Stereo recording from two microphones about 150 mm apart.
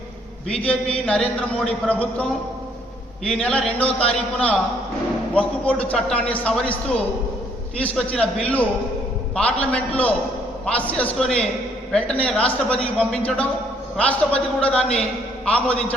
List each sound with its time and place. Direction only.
1.0 s a man's voice: 5° left (ahead or behind)
3.2 s a man's voice: 5° left (ahead or behind)